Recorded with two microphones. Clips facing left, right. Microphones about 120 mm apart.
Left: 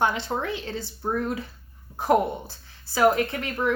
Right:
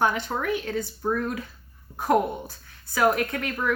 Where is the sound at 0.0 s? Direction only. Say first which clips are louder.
Even; 25° left (ahead or behind).